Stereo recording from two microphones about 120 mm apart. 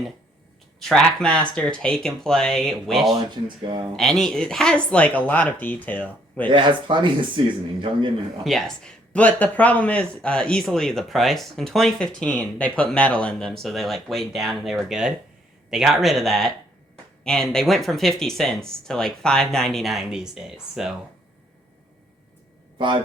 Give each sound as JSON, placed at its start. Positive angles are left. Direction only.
{"t": 0.8, "sound": "speech", "side_deg": 5}
{"t": 3.2, "sound": "speech", "side_deg": -40}
{"t": 3.9, "sound": "speech", "side_deg": 5}
{"t": 6.5, "sound": "speech", "side_deg": -40}
{"t": 8.4, "sound": "speech", "side_deg": 5}